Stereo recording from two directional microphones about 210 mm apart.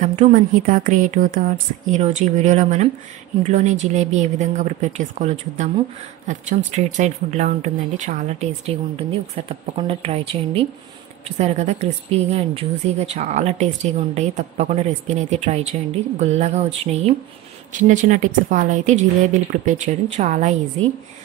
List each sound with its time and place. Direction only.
0.0 s speech: 35° right (ahead or behind)